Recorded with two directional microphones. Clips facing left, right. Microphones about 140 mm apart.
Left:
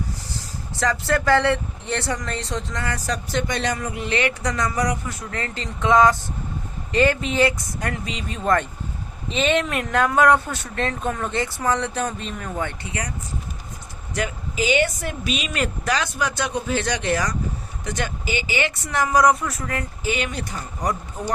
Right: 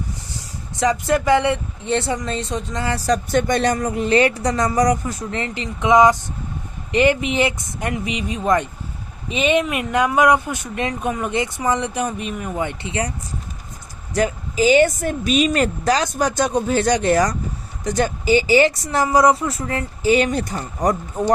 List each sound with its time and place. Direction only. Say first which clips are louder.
0.3 s speech: right 3 dB; 20° right (ahead or behind)
3.2 s a woman's voice: right 4 dB; 50° right (ahead or behind)
5.3 s speech: right 4 dB; 20° right (ahead or behind)
14.1 s a woman's voice: right 7 dB; 40° right (ahead or behind)